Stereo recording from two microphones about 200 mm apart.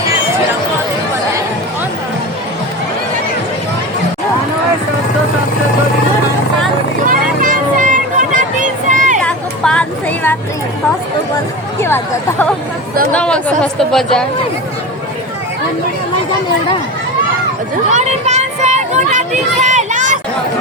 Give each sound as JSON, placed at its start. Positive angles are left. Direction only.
{"t": 7.1, "sound": "vehicle", "side_deg": -40}
{"t": 9.2, "sound": "vehicle", "side_deg": 5}
{"t": 11.8, "sound": "chatter", "side_deg": 10}
{"t": 17.9, "sound": "a sound", "side_deg": -35}